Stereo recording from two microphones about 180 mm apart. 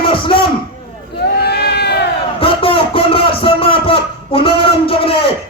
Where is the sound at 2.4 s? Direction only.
30° left (ahead or behind).